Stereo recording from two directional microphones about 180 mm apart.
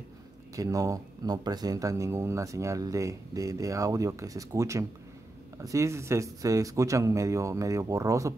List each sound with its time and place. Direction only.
0.6 s speech: 20° right (ahead or behind)